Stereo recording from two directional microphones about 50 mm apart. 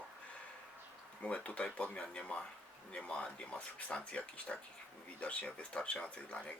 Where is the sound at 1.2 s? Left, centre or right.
Left.